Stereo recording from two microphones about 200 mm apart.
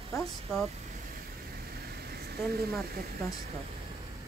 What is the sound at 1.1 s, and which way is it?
Vehicle, 50° right (ahead or behind).